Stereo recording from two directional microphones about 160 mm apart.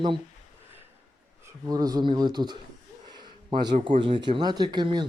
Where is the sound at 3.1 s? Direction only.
25° right (ahead or behind).